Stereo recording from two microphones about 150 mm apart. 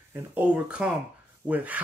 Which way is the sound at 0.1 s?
10° right (ahead or behind).